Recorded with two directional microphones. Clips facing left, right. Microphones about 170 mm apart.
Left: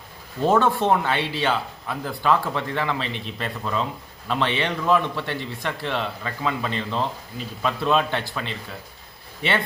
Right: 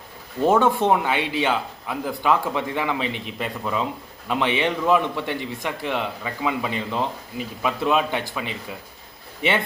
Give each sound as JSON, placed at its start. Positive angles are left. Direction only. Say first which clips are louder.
{"t": 0.4, "sound": "a man's voice", "louder": "right 1 dB", "side_deg": -15}